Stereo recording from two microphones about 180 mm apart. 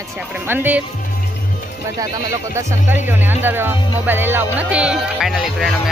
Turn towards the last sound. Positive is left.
turn(degrees=0)  # may be behind; listen again after turning